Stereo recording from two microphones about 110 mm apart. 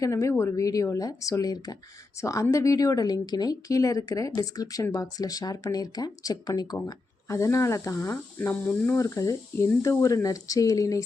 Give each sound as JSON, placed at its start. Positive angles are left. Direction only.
{"t": 0.0, "sound": "speech", "side_deg": 30}
{"t": 8.6, "sound": "speech", "side_deg": 10}
{"t": 9.0, "sound": "speech", "side_deg": 30}